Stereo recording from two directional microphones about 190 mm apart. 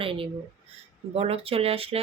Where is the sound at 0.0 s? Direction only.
30° right (ahead or behind).